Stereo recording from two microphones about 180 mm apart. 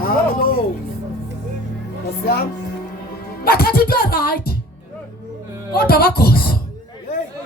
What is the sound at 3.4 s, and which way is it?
Music, 55° left (ahead or behind).